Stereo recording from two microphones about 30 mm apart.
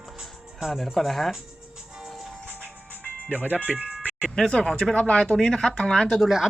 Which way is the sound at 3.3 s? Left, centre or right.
Right.